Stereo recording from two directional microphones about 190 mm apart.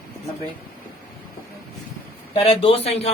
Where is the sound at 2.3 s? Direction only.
30° left (ahead or behind).